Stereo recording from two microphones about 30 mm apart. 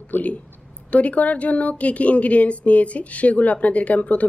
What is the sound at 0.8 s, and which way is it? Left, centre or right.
A woman's voice, left.